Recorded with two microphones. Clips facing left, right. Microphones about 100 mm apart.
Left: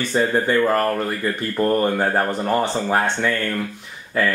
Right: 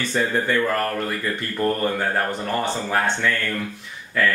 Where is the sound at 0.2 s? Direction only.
25° left (ahead or behind).